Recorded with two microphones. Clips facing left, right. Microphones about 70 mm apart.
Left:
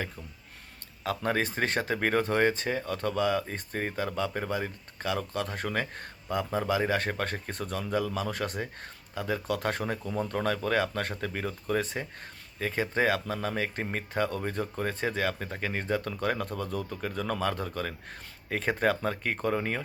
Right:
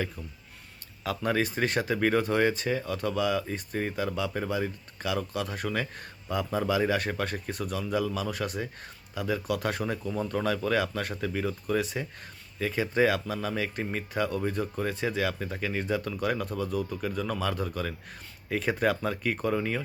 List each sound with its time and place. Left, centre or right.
1.0 s speech: left